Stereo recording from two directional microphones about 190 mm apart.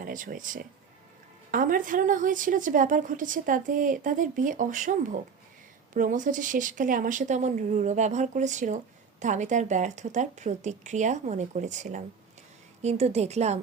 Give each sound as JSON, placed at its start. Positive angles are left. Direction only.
{"t": 0.0, "sound": "a woman's voice", "side_deg": -45}